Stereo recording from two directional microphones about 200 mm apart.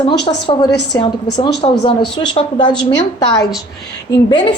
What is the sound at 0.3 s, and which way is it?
A woman's voice, 25° left (ahead or behind).